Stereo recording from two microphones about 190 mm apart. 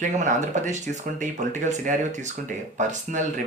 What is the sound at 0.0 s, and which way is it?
Speech, 40° right (ahead or behind).